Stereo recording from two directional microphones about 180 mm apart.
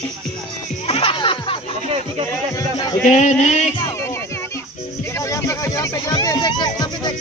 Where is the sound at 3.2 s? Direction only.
40° left (ahead or behind).